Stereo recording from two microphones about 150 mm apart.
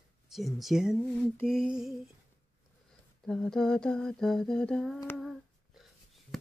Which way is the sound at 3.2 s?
5° left (ahead or behind).